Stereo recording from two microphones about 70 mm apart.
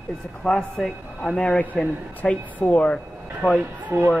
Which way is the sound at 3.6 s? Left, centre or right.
Right.